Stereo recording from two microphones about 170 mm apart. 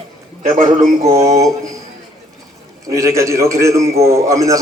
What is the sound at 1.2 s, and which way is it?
Speech, 20° right (ahead or behind).